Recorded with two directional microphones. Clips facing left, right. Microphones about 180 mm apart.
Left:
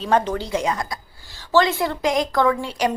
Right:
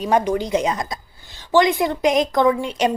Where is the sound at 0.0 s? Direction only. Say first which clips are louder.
Right 2 dB; 15° right (ahead or behind).